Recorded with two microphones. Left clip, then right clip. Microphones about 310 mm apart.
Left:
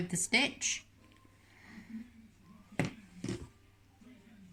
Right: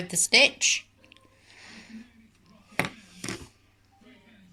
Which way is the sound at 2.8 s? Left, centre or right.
Right.